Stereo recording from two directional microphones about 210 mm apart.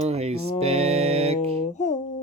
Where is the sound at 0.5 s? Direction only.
30° right (ahead or behind).